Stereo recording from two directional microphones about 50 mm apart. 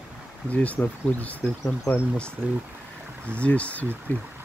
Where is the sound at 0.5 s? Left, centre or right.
Left.